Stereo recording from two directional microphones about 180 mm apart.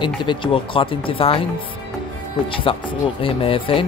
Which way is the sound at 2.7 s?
30° left (ahead or behind).